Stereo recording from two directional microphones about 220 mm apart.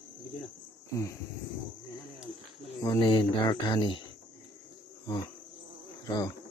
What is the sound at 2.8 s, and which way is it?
Cricket, 20° left (ahead or behind).